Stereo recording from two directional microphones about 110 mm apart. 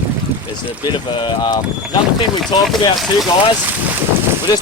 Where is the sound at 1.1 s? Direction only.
45° left (ahead or behind).